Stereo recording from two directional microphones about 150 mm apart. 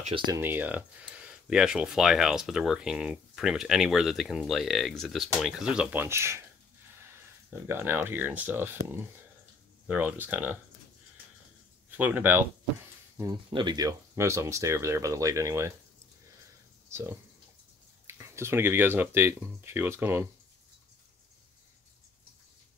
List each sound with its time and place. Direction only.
0.3 s speech: 15° right (ahead or behind)
7.5 s speech: 15° right (ahead or behind)
12.0 s speech: 10° right (ahead or behind)
13.2 s speech: 30° right (ahead or behind)
16.9 s speech: 15° right (ahead or behind)